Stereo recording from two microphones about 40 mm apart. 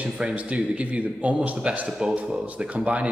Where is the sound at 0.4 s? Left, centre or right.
Right.